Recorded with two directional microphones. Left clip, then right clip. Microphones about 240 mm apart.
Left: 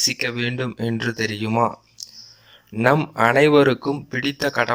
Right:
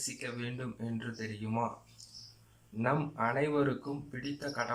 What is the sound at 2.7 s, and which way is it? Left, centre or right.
Speech, left.